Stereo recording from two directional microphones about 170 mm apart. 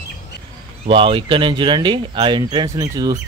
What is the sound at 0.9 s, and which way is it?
Speech, 30° right (ahead or behind).